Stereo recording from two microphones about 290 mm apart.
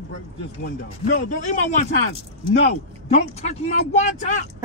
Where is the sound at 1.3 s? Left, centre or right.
Left.